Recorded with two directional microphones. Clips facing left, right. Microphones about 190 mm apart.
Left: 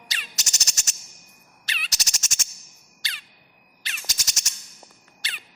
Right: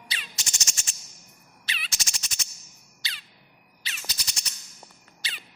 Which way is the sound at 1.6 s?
45° left (ahead or behind).